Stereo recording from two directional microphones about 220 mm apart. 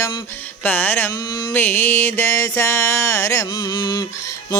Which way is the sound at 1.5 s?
10° left (ahead or behind).